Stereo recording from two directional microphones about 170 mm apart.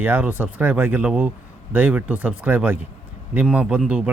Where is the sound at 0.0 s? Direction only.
10° right (ahead or behind).